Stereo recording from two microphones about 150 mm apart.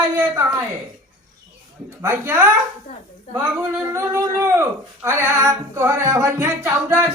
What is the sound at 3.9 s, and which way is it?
Music, 20° right (ahead or behind).